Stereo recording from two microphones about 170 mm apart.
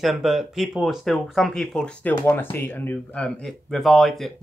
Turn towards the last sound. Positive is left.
turn(degrees=0)  # may be behind; listen again after turning